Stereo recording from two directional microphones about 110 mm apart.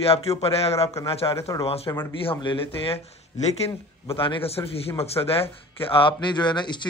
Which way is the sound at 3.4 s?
65° left (ahead or behind).